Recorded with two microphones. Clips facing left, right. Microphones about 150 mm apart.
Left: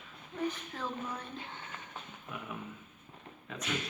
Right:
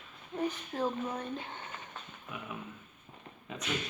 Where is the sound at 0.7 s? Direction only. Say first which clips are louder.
Right 5 dB; 35° right (ahead or behind).